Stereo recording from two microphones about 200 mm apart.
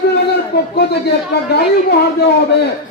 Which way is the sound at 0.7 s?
55° left (ahead or behind).